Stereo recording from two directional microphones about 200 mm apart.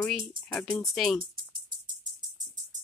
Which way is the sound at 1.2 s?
45° right (ahead or behind).